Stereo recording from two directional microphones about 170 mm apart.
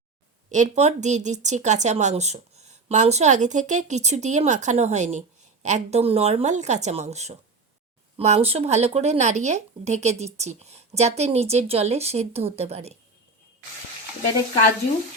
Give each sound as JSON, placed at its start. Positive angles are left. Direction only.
{"t": 0.5, "sound": "speech", "side_deg": -45}